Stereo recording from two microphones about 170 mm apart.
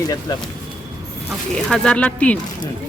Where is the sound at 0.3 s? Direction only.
20° left (ahead or behind).